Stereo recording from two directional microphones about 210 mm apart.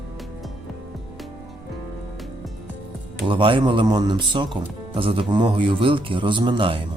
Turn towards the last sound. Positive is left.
turn(degrees=-25)  # may be behind; listen again after turning